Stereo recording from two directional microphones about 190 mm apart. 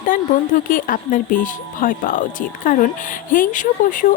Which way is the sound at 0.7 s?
45° left (ahead or behind).